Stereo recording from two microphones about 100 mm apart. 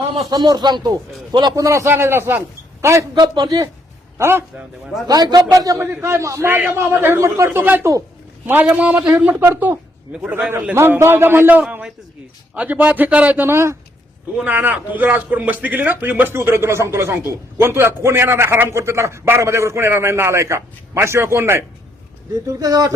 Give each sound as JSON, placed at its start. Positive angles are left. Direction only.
{"t": 0.3, "sound": "speech", "side_deg": -45}
{"t": 1.5, "sound": "a man's voice", "side_deg": -30}
{"t": 3.2, "sound": "speech", "side_deg": -45}
{"t": 4.2, "sound": "a man's voice", "side_deg": -25}
{"t": 5.0, "sound": "a man's voice", "side_deg": -45}
{"t": 5.8, "sound": "a man's voice", "side_deg": -25}
{"t": 10.8, "sound": "a man's voice", "side_deg": -25}
{"t": 11.6, "sound": "a man's voice", "side_deg": -5}
{"t": 12.5, "sound": "a man's voice", "side_deg": -15}